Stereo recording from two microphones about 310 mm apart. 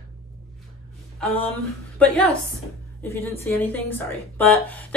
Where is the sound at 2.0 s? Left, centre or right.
Centre.